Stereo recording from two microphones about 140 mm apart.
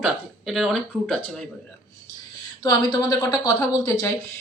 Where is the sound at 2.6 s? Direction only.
30° left (ahead or behind).